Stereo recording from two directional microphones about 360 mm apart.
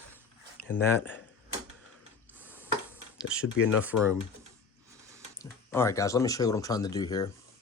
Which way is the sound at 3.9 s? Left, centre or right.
Left.